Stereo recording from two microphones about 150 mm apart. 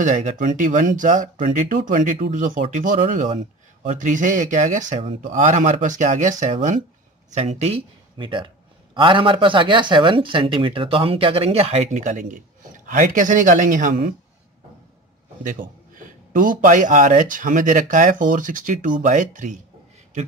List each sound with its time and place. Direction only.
0.0 s speech: 60° right (ahead or behind)
7.3 s speech: 45° right (ahead or behind); by 14.1 s 60° right (ahead or behind)
15.4 s speech: 60° right (ahead or behind)